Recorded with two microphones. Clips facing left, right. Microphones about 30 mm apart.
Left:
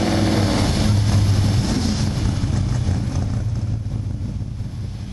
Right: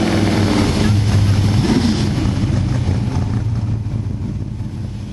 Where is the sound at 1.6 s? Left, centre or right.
Right.